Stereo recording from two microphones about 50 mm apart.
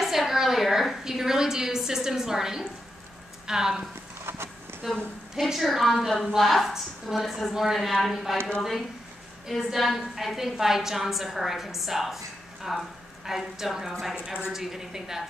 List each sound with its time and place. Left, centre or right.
0.0 s a sound: centre
3.4 s a woman's voice: centre
4.2 s a sound: right
4.8 s a woman's voice: centre
5.5 s a woman's voice: centre
9.7 s a woman's voice: centre